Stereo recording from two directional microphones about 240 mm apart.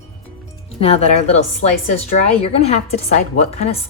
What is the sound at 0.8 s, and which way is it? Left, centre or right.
Speech, left.